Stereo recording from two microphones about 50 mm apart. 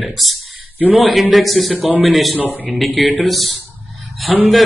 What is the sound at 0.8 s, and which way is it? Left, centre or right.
Speech, right.